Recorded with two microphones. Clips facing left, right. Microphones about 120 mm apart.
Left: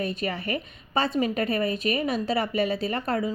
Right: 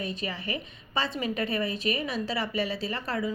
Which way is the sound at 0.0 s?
60° left (ahead or behind).